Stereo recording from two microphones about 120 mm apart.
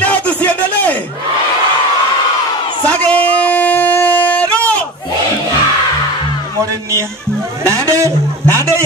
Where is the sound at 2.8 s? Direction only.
10° left (ahead or behind).